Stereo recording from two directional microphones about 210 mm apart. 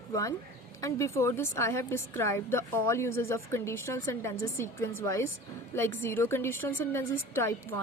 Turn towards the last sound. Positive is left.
turn(degrees=10)  # may be behind; listen again after turning